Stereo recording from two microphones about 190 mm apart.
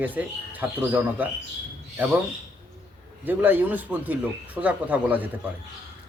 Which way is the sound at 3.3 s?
10° right (ahead or behind).